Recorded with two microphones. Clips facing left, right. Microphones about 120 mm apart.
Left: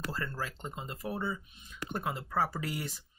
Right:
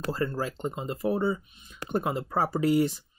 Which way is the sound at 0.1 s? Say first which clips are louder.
Right 8 dB; 25° right (ahead or behind).